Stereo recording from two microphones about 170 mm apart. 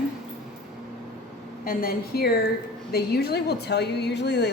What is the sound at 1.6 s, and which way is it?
A woman's voice, 60° left (ahead or behind).